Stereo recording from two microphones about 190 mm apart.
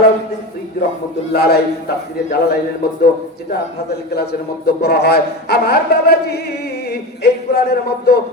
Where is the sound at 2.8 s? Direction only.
55° left (ahead or behind).